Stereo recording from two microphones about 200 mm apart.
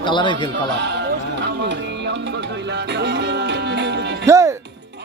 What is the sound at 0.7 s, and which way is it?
Music, 60° right (ahead or behind).